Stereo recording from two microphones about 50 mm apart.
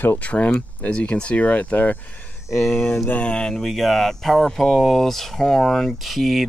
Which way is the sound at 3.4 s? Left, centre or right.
Centre.